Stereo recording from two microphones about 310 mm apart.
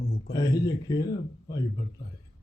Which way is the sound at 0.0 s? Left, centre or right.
Left.